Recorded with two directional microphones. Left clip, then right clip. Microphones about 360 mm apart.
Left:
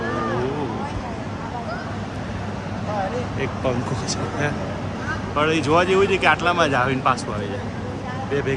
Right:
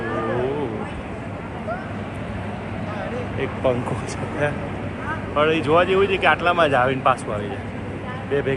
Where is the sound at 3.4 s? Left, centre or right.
Centre.